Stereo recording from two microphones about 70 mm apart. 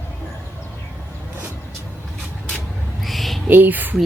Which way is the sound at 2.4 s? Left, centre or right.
Centre.